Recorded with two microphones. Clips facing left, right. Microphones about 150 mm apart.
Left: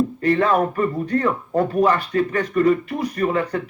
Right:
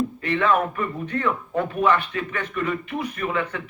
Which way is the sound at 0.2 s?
40° left (ahead or behind).